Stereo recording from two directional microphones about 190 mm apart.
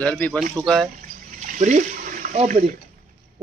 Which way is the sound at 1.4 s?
40° right (ahead or behind).